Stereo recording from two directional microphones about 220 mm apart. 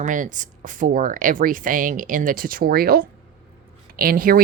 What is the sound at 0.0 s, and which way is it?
A woman's voice, 35° right (ahead or behind).